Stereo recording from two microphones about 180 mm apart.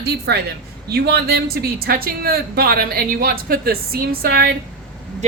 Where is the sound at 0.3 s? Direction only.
65° right (ahead or behind).